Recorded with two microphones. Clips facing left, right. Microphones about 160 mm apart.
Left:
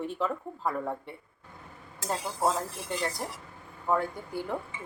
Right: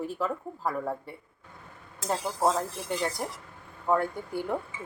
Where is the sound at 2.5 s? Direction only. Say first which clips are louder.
Right 2 dB; centre (ahead or behind).